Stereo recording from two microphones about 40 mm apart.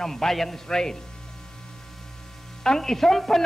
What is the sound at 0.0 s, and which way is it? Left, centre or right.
Speech, centre.